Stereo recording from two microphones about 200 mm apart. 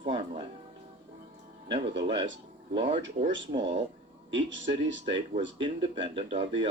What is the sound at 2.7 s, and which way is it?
Speech, 30° right (ahead or behind).